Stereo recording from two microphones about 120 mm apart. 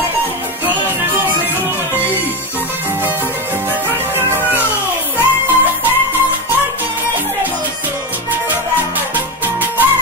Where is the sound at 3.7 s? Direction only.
15° right (ahead or behind).